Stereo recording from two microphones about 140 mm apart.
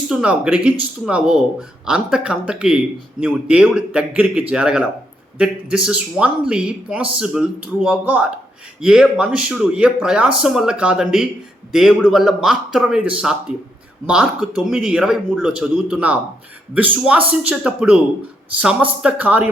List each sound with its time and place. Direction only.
0.1 s speech: 5° right (ahead or behind)